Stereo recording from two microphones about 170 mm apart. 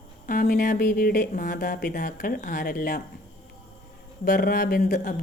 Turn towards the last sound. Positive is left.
turn(degrees=60)  # may be behind; listen again after turning